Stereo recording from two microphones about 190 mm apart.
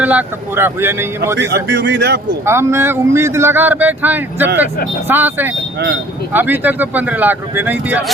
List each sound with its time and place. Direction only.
0.0 s speech: 10° right (ahead or behind)
1.4 s speech: 60° right (ahead or behind)
2.4 s speech: 15° right (ahead or behind)